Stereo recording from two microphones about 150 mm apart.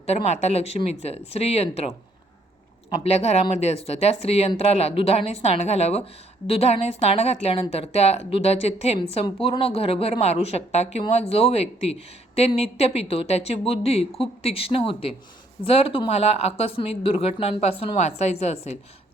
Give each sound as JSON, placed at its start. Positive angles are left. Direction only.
{"t": 0.0, "sound": "speech", "side_deg": 45}
{"t": 3.0, "sound": "speech", "side_deg": 45}